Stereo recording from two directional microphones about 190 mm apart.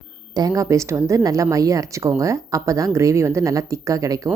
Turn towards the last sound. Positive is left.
turn(degrees=-15)  # may be behind; listen again after turning